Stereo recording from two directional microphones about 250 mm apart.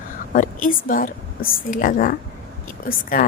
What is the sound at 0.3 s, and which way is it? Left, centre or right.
A woman's voice, left.